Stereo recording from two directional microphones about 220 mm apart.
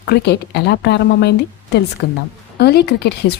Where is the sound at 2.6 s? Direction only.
45° left (ahead or behind).